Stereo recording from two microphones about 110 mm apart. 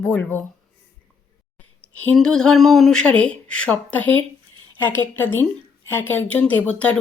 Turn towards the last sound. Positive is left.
turn(degrees=10)  # may be behind; listen again after turning